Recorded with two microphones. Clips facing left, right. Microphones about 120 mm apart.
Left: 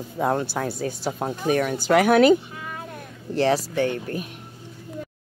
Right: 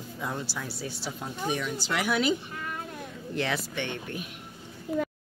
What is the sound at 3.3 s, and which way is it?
Speech, 35° left (ahead or behind).